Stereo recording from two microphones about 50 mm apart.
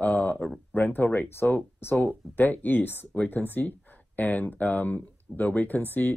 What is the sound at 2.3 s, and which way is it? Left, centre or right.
Speech, left.